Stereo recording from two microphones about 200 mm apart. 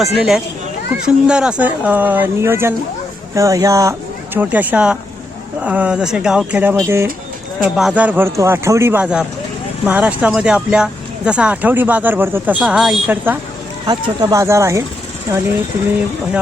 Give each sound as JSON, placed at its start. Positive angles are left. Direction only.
{"t": 0.0, "sound": "speech", "side_deg": 0}
{"t": 7.6, "sound": "speech", "side_deg": 0}
{"t": 13.8, "sound": "speech", "side_deg": -20}